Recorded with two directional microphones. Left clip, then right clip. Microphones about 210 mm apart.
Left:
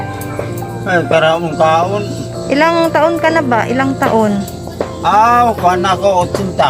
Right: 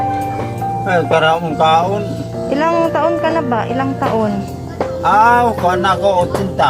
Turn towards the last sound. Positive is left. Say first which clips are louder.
# left 1 dB
turn(degrees=5)  # may be behind; listen again after turning